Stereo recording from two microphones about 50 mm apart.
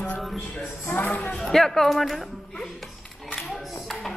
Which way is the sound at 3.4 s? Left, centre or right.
Centre.